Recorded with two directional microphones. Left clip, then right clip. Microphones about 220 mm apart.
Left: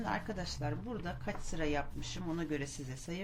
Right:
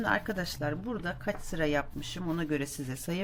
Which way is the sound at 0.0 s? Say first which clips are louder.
Right 8 dB; 45° right (ahead or behind).